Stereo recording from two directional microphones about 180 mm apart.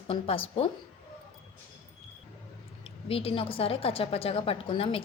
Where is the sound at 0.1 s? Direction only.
30° left (ahead or behind).